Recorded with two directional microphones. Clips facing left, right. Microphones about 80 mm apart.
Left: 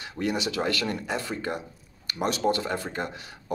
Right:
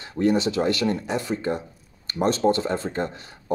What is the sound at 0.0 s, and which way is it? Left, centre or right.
Speech, right.